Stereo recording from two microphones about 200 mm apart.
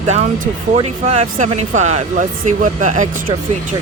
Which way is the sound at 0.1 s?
35° right (ahead or behind).